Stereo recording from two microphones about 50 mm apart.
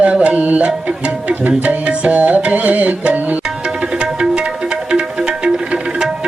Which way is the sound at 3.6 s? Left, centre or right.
Centre.